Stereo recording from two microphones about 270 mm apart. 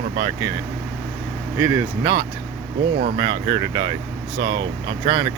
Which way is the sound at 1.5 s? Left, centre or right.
Centre.